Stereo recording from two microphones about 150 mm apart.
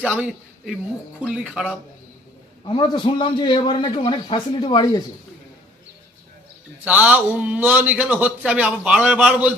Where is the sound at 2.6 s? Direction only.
30° left (ahead or behind).